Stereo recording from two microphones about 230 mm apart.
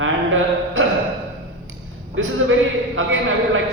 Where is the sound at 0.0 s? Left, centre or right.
Right.